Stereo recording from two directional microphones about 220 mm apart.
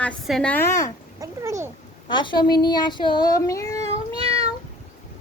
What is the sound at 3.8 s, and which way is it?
Cat, 25° right (ahead or behind).